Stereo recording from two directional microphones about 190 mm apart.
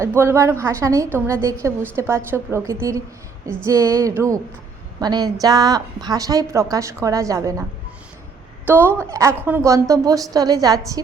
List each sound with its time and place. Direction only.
0.0 s a woman's voice: 15° right (ahead or behind)
8.6 s a woman's voice: 10° right (ahead or behind)